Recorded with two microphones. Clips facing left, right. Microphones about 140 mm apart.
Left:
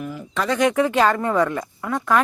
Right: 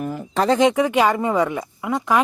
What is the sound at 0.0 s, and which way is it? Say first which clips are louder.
Speech: right 5 dB; 45° right (ahead or behind).